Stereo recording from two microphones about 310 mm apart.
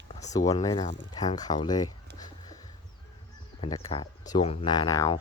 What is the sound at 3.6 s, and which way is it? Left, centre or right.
Speech, centre.